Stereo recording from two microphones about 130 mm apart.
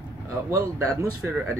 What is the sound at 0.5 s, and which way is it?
Speech, 25° right (ahead or behind).